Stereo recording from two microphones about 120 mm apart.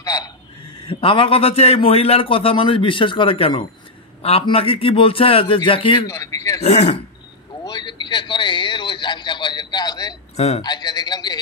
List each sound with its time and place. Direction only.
0.0 s a sound: 30° left (ahead or behind)
0.8 s a man's voice: 45° left (ahead or behind)
6.0 s speech: 25° left (ahead or behind)
6.6 s speech: 65° left (ahead or behind)
7.6 s a sound: 35° left (ahead or behind)
10.3 s a man's voice: 60° left (ahead or behind)
10.6 s a man's voice: 35° left (ahead or behind)